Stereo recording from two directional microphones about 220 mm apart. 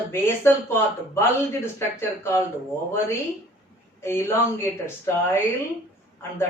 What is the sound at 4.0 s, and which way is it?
A man's voice, 10° left (ahead or behind).